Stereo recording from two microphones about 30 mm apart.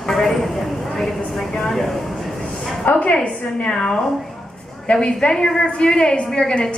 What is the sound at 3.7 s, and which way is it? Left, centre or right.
A woman's voice, left.